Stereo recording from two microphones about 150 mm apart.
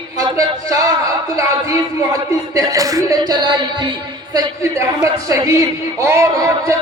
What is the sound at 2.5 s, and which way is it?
Speech, 20° right (ahead or behind).